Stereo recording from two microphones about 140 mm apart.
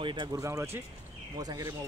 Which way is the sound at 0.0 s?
35° right (ahead or behind).